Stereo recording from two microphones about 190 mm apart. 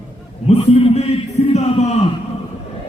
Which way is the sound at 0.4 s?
35° left (ahead or behind).